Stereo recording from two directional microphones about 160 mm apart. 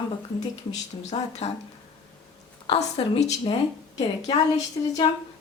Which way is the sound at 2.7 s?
40° left (ahead or behind).